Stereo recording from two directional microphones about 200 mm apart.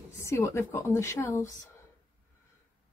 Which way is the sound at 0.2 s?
15° left (ahead or behind).